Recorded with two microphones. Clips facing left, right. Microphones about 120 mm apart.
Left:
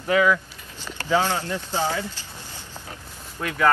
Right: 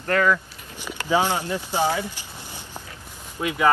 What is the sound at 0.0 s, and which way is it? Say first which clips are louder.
Speech: left 1 dB; 10° left (ahead or behind).